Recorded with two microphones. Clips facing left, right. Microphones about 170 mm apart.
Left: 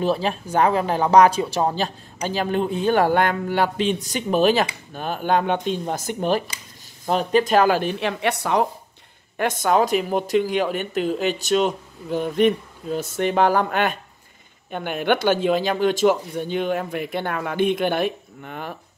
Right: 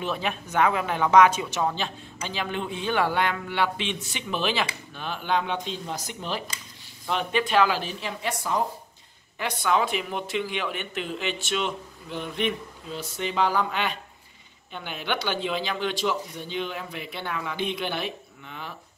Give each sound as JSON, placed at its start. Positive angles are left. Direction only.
{"t": 0.0, "sound": "speech", "side_deg": 35}
{"t": 7.1, "sound": "speech", "side_deg": 40}
{"t": 9.4, "sound": "speech", "side_deg": 45}